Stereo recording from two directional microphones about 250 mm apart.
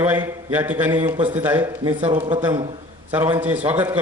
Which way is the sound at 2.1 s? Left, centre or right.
Centre.